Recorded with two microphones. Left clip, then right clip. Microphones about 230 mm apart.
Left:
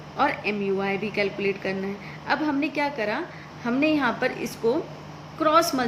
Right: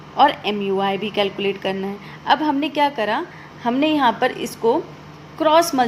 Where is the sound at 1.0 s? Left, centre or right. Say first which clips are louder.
Right 5 dB; right.